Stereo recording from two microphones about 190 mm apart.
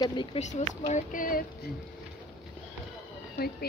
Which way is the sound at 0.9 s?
45° left (ahead or behind).